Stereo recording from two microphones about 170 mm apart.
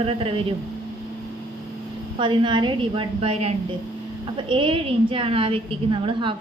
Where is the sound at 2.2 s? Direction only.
30° right (ahead or behind).